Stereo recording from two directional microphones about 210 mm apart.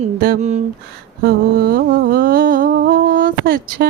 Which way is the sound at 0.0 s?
40° right (ahead or behind).